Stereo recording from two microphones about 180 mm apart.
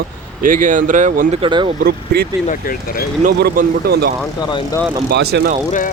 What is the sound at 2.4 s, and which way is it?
Speech, 50° left (ahead or behind).